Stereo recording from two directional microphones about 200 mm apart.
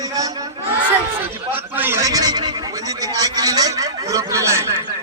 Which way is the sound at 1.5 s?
10° right (ahead or behind).